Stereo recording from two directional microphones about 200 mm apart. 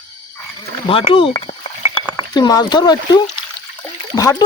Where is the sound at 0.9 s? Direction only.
25° left (ahead or behind).